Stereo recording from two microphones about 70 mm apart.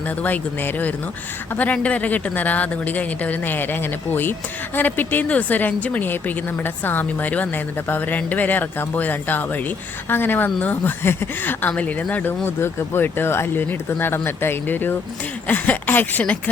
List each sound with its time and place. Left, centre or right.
0.2 s speech: left
11.7 s speech: centre
12.5 s speech: left